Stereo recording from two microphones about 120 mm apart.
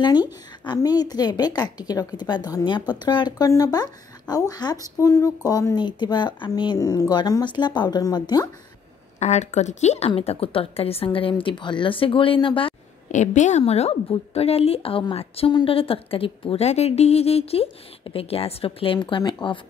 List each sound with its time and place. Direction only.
0.0 s speech: 40° left (ahead or behind)
9.2 s a woman's voice: 70° left (ahead or behind); by 12.7 s 45° left (ahead or behind)
13.1 s a woman's voice: 85° left; by 19.6 s 45° left (ahead or behind)